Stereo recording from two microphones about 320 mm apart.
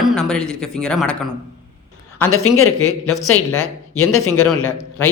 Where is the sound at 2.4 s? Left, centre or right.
Left.